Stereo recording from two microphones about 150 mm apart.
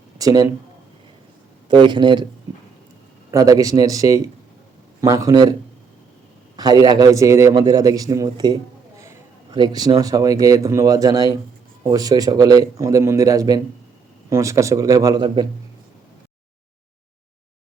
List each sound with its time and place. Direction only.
0.2 s speech: 25° right (ahead or behind)
1.6 s speech: 30° right (ahead or behind)
3.3 s a man's voice: 25° right (ahead or behind)
6.6 s a man's voice: 25° right (ahead or behind)